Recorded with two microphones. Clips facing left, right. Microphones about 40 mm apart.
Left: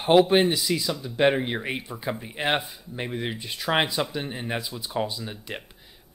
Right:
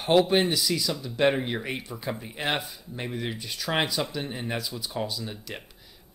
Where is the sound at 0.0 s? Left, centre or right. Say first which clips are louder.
Left 3 dB; centre.